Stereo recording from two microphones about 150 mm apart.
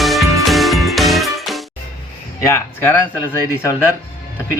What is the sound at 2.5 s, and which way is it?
Speech, 15° left (ahead or behind).